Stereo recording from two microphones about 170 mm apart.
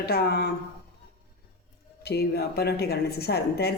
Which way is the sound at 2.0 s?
70° left (ahead or behind).